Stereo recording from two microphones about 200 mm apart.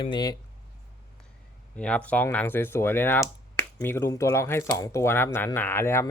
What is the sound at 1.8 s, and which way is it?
Speech, 5° left (ahead or behind).